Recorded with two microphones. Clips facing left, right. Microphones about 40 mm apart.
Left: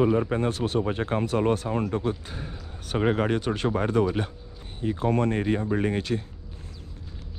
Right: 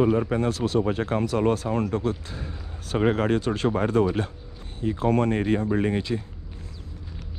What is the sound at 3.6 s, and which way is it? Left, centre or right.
Speech, right.